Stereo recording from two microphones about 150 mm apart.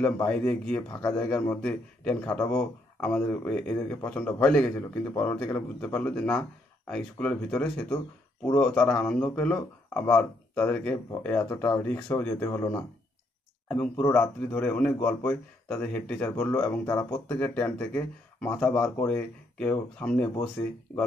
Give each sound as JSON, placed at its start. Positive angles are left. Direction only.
{"t": 0.0, "sound": "speech", "side_deg": 10}